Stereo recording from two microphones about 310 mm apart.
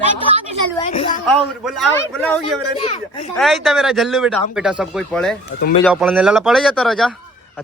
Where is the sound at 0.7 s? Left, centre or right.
Centre.